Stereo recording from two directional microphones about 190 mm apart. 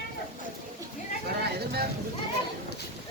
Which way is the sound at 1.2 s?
55° right (ahead or behind).